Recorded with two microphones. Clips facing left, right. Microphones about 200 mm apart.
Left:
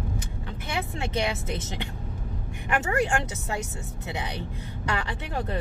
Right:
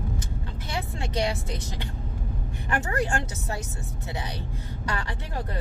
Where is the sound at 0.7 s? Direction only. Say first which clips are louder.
Left 2 dB; 20° left (ahead or behind).